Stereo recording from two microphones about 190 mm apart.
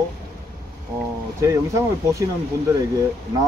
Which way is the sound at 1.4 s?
15° right (ahead or behind).